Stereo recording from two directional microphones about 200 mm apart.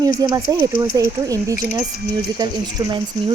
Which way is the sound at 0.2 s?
20° right (ahead or behind).